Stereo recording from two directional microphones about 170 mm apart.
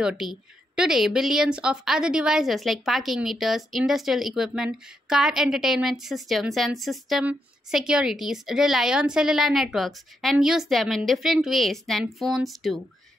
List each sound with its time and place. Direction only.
0.0 s speech: 5° right (ahead or behind)